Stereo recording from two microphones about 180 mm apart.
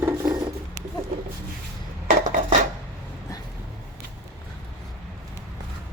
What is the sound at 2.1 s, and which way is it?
Dishes, 50° right (ahead or behind).